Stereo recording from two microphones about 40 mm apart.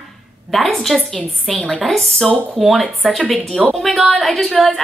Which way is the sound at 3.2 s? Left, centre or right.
Left.